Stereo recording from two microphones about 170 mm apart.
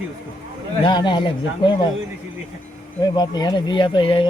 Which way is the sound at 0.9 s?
25° left (ahead or behind).